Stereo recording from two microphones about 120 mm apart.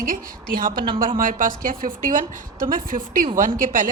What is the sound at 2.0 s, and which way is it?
Speech, 90° right.